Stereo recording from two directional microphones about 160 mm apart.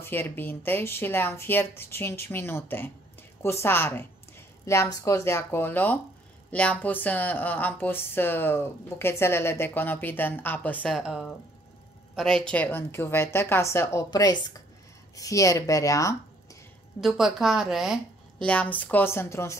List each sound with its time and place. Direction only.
0.0 s speech: 10° left (ahead or behind)
11.0 s speech: 5° right (ahead or behind); by 16.2 s 20° left (ahead or behind)
17.0 s speech: centre (ahead or behind)
18.5 s speech: 10° left (ahead or behind)